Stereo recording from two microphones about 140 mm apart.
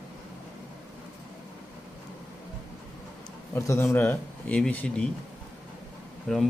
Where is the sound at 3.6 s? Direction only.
20° left (ahead or behind).